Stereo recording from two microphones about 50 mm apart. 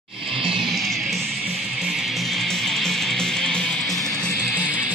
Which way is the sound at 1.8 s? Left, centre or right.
Centre.